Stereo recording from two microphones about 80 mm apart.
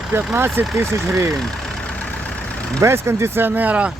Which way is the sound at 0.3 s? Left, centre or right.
Right.